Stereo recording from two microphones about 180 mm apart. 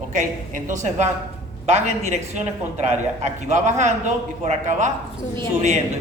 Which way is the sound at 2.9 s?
40° right (ahead or behind).